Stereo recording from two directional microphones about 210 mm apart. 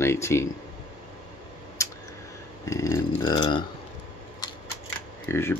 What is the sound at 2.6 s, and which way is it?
Speech, 15° left (ahead or behind).